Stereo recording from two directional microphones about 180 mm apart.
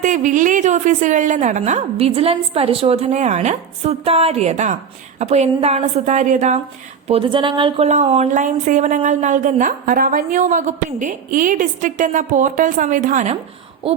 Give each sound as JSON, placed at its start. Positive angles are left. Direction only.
{"t": 0.0, "sound": "a woman's voice", "side_deg": -45}
{"t": 7.1, "sound": "speech", "side_deg": -30}
{"t": 13.8, "sound": "a woman's voice", "side_deg": -30}